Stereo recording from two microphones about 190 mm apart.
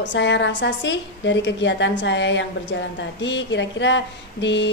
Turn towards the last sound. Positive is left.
turn(degrees=70)  # may be behind; listen again after turning